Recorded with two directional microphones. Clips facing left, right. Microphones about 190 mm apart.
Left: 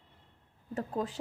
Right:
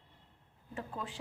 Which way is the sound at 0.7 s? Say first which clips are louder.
Left 8 dB; 40° left (ahead or behind).